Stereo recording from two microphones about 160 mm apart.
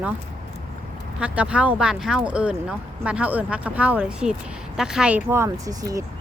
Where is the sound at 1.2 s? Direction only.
5° right (ahead or behind).